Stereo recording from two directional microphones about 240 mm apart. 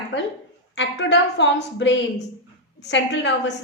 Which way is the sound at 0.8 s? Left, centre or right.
Left.